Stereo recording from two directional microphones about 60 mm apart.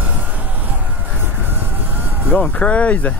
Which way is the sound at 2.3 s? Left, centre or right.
Left.